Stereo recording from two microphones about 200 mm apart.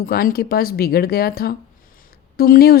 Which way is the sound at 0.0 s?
45° left (ahead or behind).